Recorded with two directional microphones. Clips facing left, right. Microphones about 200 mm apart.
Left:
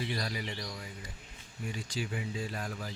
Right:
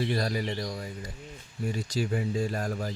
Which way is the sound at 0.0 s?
45° right (ahead or behind).